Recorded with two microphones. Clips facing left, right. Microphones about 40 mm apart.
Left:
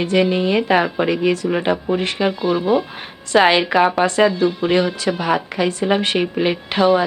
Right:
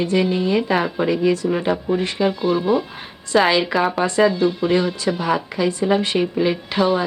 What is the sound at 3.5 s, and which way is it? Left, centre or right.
Speech, left.